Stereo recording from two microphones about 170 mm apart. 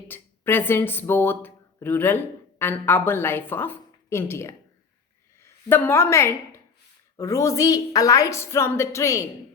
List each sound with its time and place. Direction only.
0.1 s a woman's voice: 10° left (ahead or behind)